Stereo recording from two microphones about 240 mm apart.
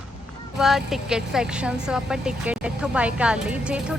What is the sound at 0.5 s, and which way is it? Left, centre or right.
A woman's voice, centre.